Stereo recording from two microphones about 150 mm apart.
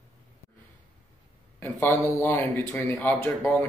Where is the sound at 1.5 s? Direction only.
15° left (ahead or behind).